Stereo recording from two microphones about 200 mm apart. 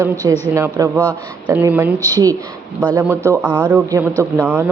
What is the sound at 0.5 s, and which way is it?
A man's voice, 15° right (ahead or behind).